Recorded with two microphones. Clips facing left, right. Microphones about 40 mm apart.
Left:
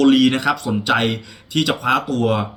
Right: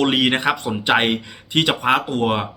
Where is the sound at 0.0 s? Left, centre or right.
Right.